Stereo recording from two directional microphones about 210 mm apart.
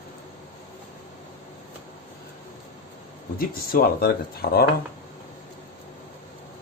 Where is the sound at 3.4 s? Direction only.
45° left (ahead or behind).